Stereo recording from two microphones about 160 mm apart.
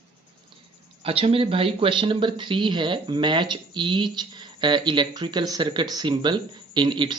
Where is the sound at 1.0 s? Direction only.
35° right (ahead or behind).